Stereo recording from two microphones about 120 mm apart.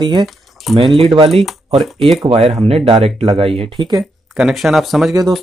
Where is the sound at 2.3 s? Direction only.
50° right (ahead or behind).